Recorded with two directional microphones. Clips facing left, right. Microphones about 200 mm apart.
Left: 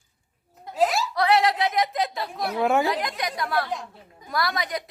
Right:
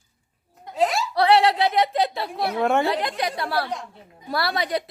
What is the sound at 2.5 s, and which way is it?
Speech, centre (ahead or behind).